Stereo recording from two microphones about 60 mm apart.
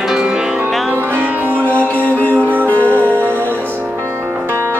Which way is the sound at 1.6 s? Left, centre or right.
Left.